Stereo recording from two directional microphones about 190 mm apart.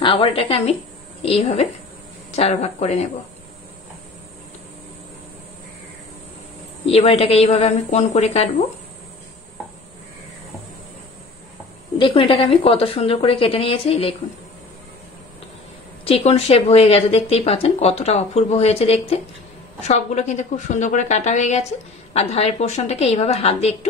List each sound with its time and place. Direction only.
0.0 s speech: 30° left (ahead or behind)
6.9 s speech: 30° left (ahead or behind)
12.0 s speech: 25° left (ahead or behind)
16.1 s speech: 30° left (ahead or behind)